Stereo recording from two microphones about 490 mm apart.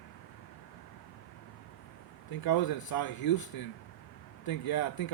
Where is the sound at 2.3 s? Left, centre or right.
Left.